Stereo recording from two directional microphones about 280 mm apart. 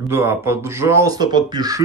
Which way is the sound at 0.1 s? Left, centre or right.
Centre.